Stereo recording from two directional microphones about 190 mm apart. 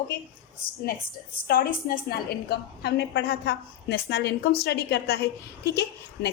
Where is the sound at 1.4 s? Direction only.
50° left (ahead or behind).